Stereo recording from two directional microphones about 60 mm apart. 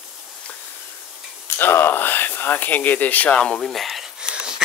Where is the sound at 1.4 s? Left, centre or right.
Left.